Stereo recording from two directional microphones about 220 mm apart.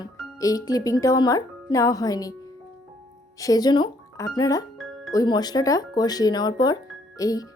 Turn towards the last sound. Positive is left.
turn(degrees=15)  # may be behind; listen again after turning